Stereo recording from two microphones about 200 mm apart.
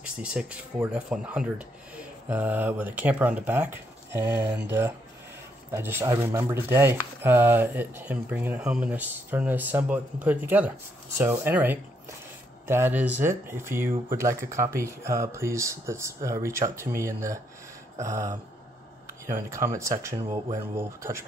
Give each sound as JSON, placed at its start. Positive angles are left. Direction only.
{"t": 0.0, "sound": "speech", "side_deg": -5}